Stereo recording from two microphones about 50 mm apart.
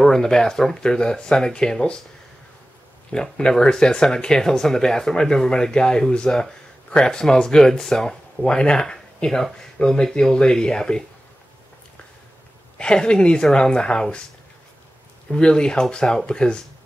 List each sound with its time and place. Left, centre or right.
0.0 s speech: centre
3.1 s speech: centre
12.7 s speech: centre
15.2 s speech: centre